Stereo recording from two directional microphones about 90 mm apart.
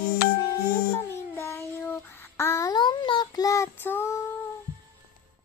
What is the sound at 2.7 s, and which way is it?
Child singing, 55° left (ahead or behind).